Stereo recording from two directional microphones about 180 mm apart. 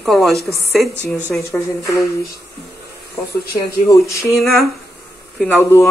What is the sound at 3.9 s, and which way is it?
Speech, 15° left (ahead or behind).